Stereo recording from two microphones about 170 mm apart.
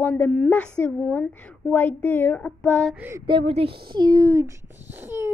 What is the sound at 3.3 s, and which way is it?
A child's voice, 30° right (ahead or behind).